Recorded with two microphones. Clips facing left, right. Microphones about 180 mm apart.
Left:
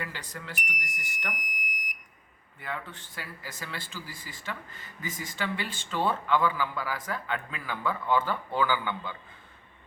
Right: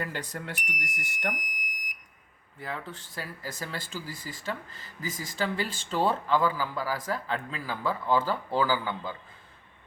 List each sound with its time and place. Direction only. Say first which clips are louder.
0.0 s speech: right 4 dB; 50° right (ahead or behind)
1.3 s fire alarm: right 2 dB; 20° right (ahead or behind)
2.6 s speech: right 1 dB; 35° right (ahead or behind)